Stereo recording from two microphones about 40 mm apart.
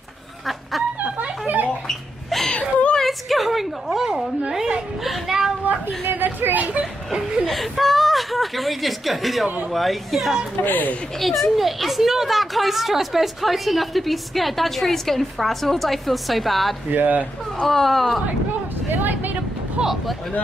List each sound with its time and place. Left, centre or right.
1.9 s wail: centre
3.0 s a sound: centre
5.0 s child singing: centre
6.0 s a sound: right
6.8 s a sound: centre
7.4 s whimper: centre
9.7 s speech: centre
10.6 s speech: left
11.1 s speech: centre
16.9 s speech: right
17.6 s speech: centre
18.9 s vehicle: right
19.8 s a sound: right